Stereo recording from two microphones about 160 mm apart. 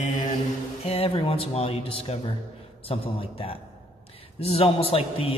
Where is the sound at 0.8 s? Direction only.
40° left (ahead or behind).